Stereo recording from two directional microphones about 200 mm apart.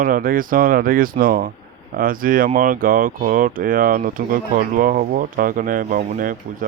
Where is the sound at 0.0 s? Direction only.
45° right (ahead or behind).